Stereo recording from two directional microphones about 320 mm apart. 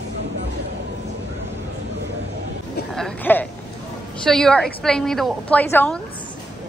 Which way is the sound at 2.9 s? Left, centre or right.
Centre.